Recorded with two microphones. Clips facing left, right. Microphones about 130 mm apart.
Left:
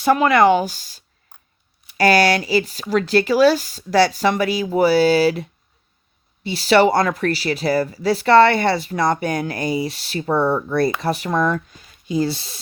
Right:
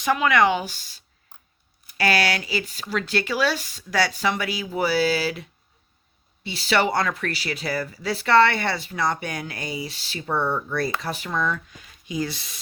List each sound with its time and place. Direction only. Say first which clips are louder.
0.0 s speech: left 6 dB; 40° left (ahead or behind)